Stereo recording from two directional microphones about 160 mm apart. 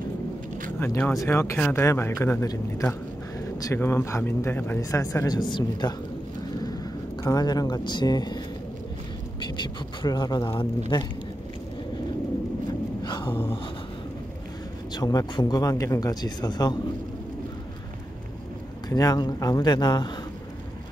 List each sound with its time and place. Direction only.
0.7 s a man's voice: 15° left (ahead or behind)
9.4 s speech: 30° left (ahead or behind)
13.0 s a sound: 30° left (ahead or behind)
14.9 s speech: 25° left (ahead or behind)
18.9 s speech: 25° left (ahead or behind)